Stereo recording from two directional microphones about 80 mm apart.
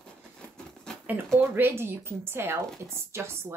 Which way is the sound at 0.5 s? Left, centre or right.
Centre.